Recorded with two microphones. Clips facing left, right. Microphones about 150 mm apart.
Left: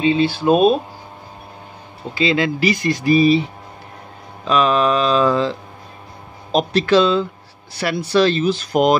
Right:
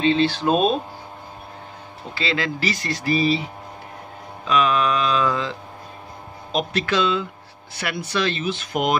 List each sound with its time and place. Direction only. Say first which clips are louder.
0.0 s speech: left 2 dB; 10° left (ahead or behind)
2.1 s speech: left 7 dB; 20° left (ahead or behind)
4.5 s speech: left 4 dB; 30° left (ahead or behind)